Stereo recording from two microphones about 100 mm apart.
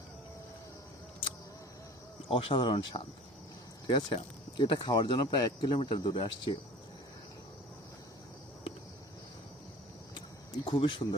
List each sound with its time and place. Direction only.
2.3 s speech: 65° left (ahead or behind)
10.2 s speech: 55° left (ahead or behind)